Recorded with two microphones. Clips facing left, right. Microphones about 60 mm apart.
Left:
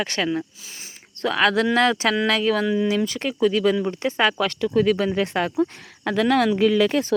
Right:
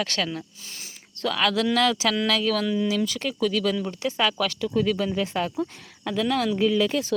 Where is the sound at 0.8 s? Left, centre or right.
Left.